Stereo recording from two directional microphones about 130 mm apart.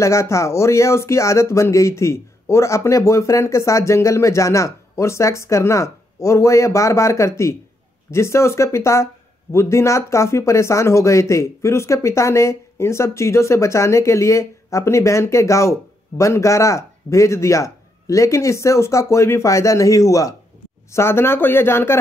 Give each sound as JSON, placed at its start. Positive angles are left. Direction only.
{"t": 0.0, "sound": "speech", "side_deg": 20}